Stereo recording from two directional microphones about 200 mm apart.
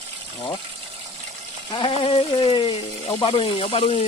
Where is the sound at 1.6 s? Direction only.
25° left (ahead or behind).